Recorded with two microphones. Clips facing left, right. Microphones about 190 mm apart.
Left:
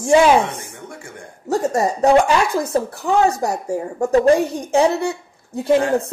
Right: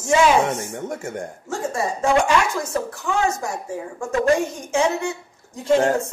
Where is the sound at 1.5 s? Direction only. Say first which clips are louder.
Left 7 dB; 40° left (ahead or behind).